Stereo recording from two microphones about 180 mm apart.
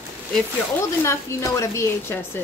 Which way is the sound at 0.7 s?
15° left (ahead or behind).